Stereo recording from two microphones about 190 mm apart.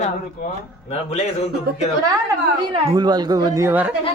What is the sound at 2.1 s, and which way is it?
A woman's voice, 25° right (ahead or behind).